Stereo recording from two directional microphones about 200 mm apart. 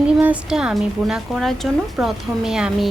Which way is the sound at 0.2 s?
5° right (ahead or behind).